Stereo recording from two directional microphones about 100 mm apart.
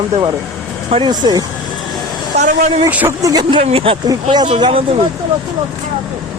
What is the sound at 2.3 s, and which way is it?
Speech, 90° right.